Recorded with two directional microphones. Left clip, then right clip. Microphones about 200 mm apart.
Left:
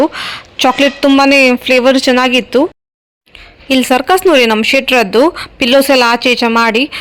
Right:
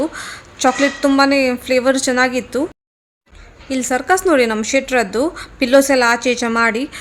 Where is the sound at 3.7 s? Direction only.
25° left (ahead or behind).